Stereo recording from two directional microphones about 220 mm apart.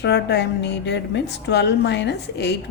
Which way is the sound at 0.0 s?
50° left (ahead or behind).